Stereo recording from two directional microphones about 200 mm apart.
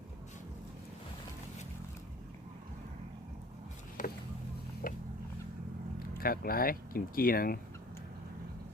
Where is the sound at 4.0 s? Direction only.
40° left (ahead or behind).